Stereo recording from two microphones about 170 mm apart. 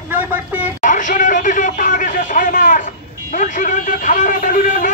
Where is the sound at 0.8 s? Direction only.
50° left (ahead or behind).